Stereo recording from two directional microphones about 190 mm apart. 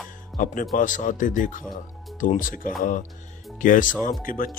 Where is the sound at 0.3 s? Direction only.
45° left (ahead or behind).